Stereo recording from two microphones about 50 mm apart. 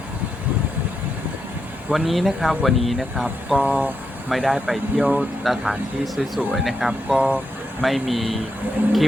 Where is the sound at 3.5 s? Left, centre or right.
Right.